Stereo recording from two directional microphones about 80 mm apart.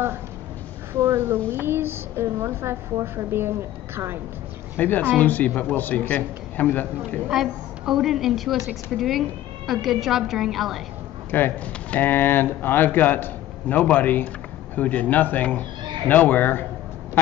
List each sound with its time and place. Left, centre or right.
0.9 s a woman's voice: right
4.7 s speech: left
7.2 s a woman's voice: centre
11.2 s speech: left